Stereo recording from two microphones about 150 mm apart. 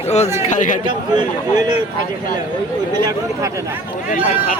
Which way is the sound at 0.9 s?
30° right (ahead or behind).